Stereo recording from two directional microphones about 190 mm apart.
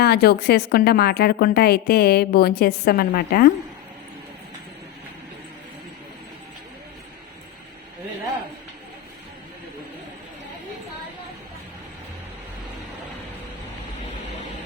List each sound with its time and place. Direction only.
0.0 s a woman's voice: 55° left (ahead or behind)